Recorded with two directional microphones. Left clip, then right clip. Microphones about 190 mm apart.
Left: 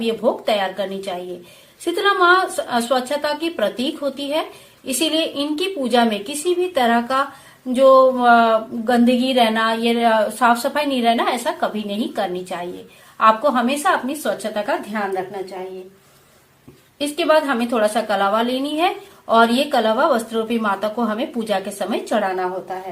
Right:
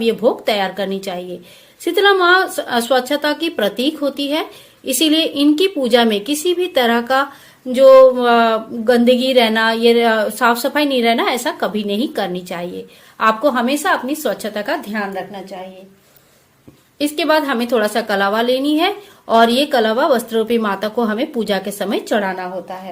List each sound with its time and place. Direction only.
0.0 s a woman's voice: 45° right (ahead or behind)
17.0 s a woman's voice: 45° right (ahead or behind)